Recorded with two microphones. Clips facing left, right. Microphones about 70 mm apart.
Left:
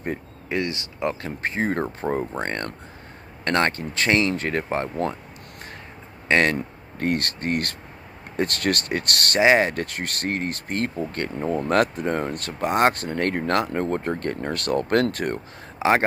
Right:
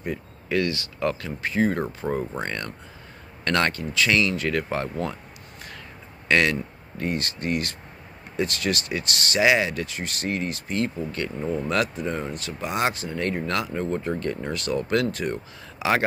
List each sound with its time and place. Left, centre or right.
0.5 s speech: left
1.4 s speech: left
2.0 s speech: left
6.2 s speech: left
7.0 s speech: left
9.4 s speech: left
15.8 s speech: left